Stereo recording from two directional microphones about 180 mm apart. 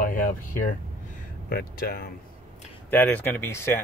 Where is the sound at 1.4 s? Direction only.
55° left (ahead or behind).